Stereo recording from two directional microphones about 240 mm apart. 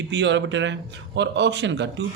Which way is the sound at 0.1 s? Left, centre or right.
Right.